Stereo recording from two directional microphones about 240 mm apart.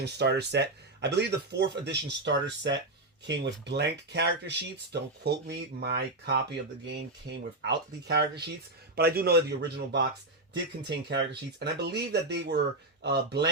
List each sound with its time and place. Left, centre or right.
0.0 s speech: right